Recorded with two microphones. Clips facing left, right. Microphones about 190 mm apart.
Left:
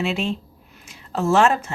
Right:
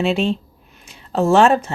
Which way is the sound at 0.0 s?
30° right (ahead or behind).